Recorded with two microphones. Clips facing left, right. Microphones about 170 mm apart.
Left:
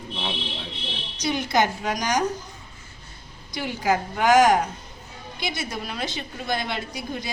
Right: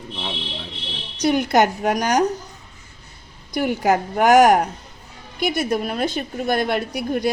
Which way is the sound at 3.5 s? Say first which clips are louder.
Right 5 dB; 60° right (ahead or behind).